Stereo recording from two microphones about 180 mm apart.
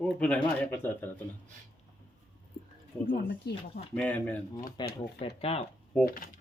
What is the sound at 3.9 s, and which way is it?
Speech, 10° left (ahead or behind).